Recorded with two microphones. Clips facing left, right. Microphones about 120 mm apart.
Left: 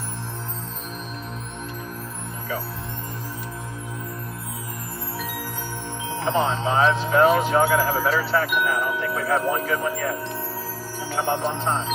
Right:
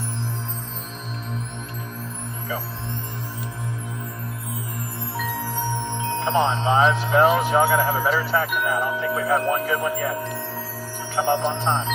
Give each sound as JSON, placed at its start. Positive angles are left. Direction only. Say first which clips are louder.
{"t": 6.2, "sound": "speech", "louder": "right 1 dB", "side_deg": -20}
{"t": 11.2, "sound": "speech", "louder": "right 3 dB", "side_deg": -5}
{"t": 11.6, "sound": "speech", "louder": "right 1 dB", "side_deg": -20}